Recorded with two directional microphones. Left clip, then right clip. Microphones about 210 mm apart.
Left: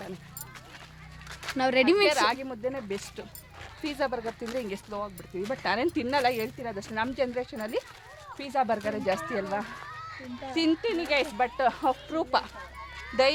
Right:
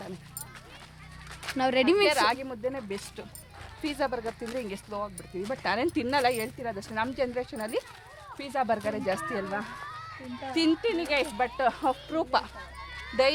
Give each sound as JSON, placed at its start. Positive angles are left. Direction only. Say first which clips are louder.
{"t": 1.4, "sound": "speech", "louder": "left 1 dB", "side_deg": 5}
{"t": 7.5, "sound": "speech", "louder": "even", "side_deg": -10}
{"t": 10.5, "sound": "speech", "louder": "right 1 dB", "side_deg": -20}
{"t": 10.8, "sound": "speech", "louder": "even", "side_deg": -10}